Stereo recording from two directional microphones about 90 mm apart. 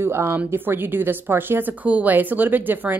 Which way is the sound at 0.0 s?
25° right (ahead or behind).